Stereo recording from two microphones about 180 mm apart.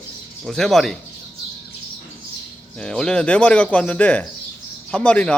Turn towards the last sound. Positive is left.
turn(degrees=5)  # may be behind; listen again after turning